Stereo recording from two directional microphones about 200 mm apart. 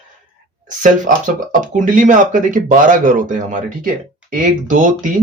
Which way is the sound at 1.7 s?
40° right (ahead or behind).